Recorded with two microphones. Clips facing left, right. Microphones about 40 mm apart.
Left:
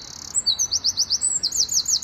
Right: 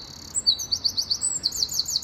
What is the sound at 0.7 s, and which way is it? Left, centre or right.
Chirp, left.